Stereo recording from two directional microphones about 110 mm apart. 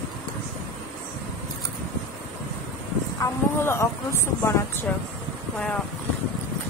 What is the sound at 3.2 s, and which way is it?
Vehicle, 25° left (ahead or behind).